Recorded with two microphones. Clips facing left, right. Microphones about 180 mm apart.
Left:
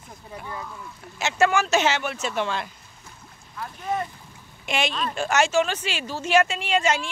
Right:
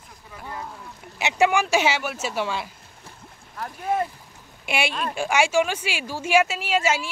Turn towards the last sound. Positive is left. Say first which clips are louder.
# even
turn(degrees=-5)  # may be behind; listen again after turning